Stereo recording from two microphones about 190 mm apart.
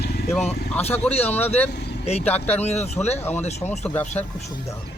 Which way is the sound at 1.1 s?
35° left (ahead or behind).